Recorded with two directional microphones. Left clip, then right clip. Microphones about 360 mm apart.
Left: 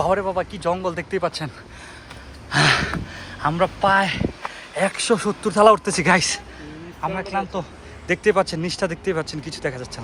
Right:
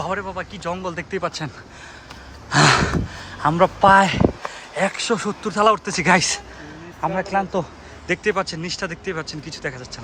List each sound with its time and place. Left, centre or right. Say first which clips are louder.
0.0 s speech: left 5 dB; centre
2.5 s speech: right 2 dB; centre
8.0 s speech: left 3 dB; centre